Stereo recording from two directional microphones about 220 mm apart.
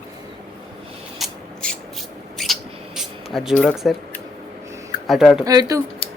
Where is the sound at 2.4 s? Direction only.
Centre (ahead or behind).